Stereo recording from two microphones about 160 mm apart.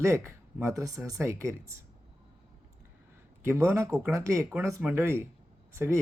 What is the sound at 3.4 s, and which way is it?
Speech, 15° right (ahead or behind).